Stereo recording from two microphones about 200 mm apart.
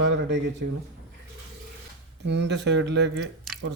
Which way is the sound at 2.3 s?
60° right (ahead or behind).